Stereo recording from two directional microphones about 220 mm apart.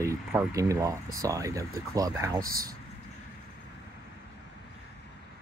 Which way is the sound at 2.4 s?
40° right (ahead or behind).